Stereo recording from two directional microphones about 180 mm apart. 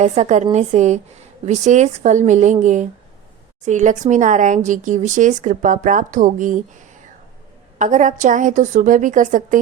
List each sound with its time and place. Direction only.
0.0 s a woman's voice: 40° right (ahead or behind)
7.8 s speech: 45° right (ahead or behind)